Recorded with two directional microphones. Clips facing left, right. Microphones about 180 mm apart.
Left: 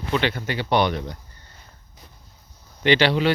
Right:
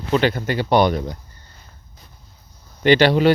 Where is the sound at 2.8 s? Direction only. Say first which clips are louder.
Right 5 dB; 45° right (ahead or behind).